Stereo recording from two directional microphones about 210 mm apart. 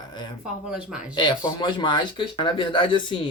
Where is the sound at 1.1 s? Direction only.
20° left (ahead or behind).